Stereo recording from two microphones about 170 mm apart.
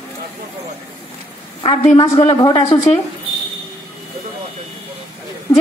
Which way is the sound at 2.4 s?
25° left (ahead or behind).